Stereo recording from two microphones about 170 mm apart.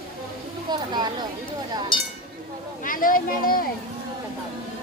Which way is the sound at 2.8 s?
55° left (ahead or behind).